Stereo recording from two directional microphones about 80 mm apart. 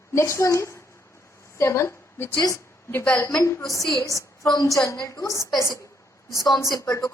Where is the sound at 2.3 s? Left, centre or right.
Left.